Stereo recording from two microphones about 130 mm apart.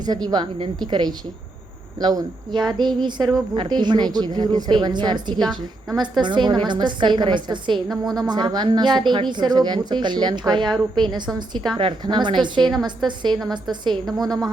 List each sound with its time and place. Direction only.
0.0 s a woman's voice: 30° right (ahead or behind)
5.4 s a woman's voice: centre (ahead or behind)
6.0 s a woman's voice: 35° right (ahead or behind)